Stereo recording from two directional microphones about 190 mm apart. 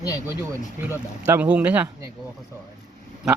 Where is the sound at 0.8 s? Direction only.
10° right (ahead or behind).